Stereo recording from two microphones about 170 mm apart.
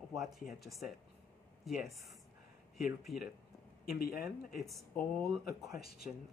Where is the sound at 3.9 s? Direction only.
60° left (ahead or behind).